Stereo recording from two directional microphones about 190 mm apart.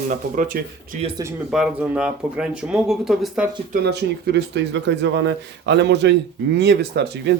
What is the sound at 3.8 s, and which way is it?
Speech, 60° right (ahead or behind).